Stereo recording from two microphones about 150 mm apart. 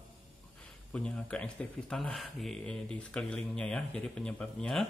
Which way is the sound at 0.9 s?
5° left (ahead or behind).